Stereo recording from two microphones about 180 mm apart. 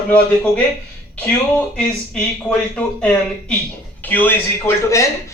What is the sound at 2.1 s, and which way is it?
Speech, 5° left (ahead or behind).